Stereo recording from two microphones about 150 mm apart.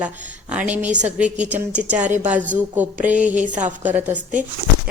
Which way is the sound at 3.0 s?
55° right (ahead or behind).